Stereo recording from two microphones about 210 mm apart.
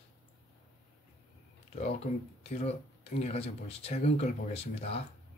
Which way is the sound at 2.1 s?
30° left (ahead or behind).